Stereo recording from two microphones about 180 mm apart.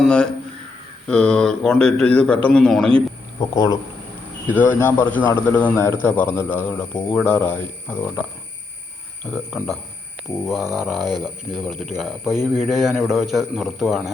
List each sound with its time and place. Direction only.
0.0 s a man's voice: 5° left (ahead or behind)
3.5 s speech: 20° left (ahead or behind)
4.5 s a man's voice: 10° left (ahead or behind)
9.2 s speech: 5° left (ahead or behind)